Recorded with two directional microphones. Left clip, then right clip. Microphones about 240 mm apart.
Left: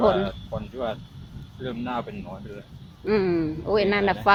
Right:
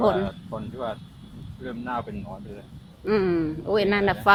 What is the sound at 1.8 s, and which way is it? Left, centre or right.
Speech, left.